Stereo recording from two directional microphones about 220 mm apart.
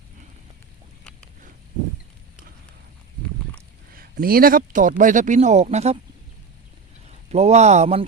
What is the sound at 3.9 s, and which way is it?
Speech, 40° right (ahead or behind).